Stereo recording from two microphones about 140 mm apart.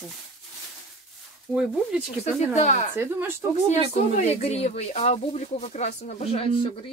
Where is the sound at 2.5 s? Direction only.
55° left (ahead or behind).